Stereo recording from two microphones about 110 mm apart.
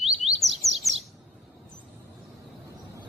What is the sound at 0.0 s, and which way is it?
Chirp, centre (ahead or behind).